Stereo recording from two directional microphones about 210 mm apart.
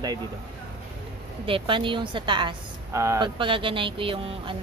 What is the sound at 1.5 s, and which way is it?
A woman's voice, 25° right (ahead or behind).